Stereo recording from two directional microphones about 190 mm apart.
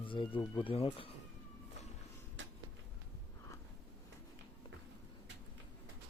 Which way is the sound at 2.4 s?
75° right (ahead or behind).